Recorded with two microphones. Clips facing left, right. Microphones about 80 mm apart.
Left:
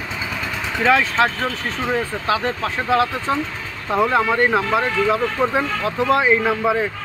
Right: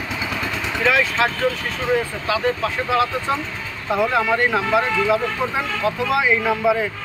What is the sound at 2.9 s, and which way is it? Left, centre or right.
Speech, left.